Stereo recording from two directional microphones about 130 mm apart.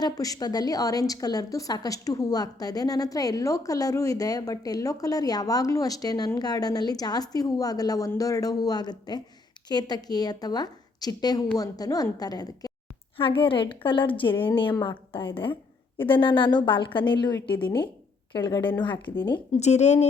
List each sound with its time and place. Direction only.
0.0 s a woman's voice: 30° left (ahead or behind)
13.1 s a woman's voice: 45° left (ahead or behind)
19.5 s a woman's voice: 60° left (ahead or behind)